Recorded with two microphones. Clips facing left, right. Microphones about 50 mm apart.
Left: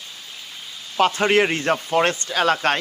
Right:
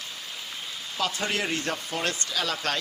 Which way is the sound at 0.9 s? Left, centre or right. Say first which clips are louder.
Left 11 dB; left.